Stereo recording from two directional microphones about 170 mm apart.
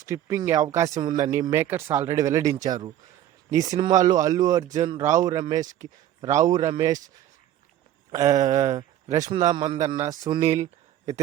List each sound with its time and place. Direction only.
0.0 s speech: 20° right (ahead or behind)
8.1 s speech: 20° right (ahead or behind)